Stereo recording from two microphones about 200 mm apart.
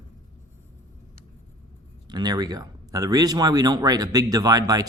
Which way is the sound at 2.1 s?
20° right (ahead or behind).